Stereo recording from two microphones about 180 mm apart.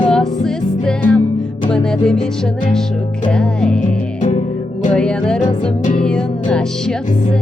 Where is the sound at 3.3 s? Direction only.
5° left (ahead or behind).